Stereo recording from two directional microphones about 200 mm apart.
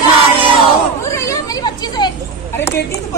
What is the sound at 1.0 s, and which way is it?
Children playing, 15° left (ahead or behind).